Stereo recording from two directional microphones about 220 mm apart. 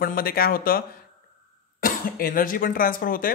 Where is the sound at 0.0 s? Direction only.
40° left (ahead or behind).